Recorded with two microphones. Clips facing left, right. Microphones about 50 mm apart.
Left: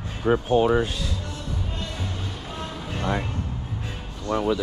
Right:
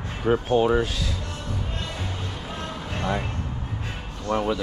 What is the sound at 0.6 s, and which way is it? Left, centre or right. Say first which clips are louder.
Speech: even; centre.